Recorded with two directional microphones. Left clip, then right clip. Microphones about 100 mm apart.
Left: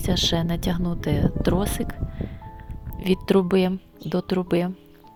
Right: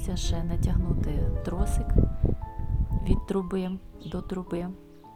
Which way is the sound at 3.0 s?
45° left (ahead or behind).